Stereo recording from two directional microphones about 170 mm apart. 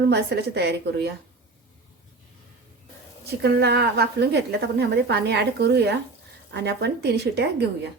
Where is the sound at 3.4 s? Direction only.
80° right.